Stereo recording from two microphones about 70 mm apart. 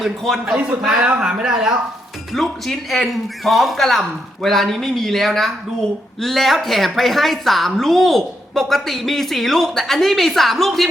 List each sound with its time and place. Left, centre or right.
0.4 s a man's voice: centre
2.3 s a woman's voice: centre